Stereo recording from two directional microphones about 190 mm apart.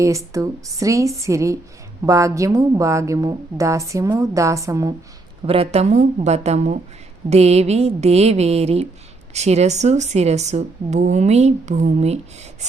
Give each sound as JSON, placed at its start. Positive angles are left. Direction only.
{"t": 0.0, "sound": "a woman's voice", "side_deg": -15}
{"t": 5.5, "sound": "speech", "side_deg": -30}